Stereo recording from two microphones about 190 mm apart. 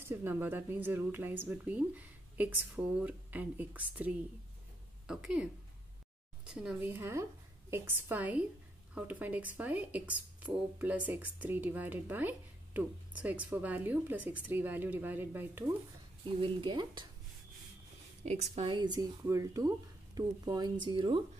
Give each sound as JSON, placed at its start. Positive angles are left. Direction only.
{"t": 0.0, "sound": "a woman's voice", "side_deg": -10}
{"t": 16.3, "sound": "speech", "side_deg": -25}
{"t": 18.2, "sound": "a woman's voice", "side_deg": -35}
{"t": 18.8, "sound": "speech", "side_deg": -20}